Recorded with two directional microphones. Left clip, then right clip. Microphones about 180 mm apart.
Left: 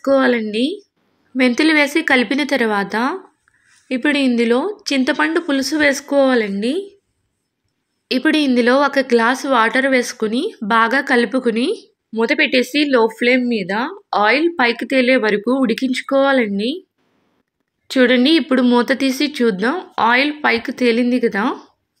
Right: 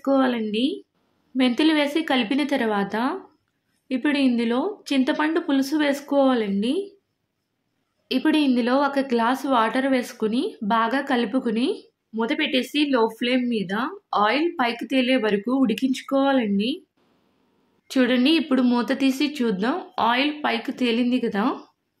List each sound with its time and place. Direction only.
0.0 s a woman's voice: 10° left (ahead or behind)
8.1 s a woman's voice: 5° left (ahead or behind)
17.8 s speech: 10° left (ahead or behind)